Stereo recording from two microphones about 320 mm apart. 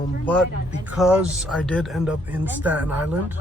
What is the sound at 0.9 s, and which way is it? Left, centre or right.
Speech, centre.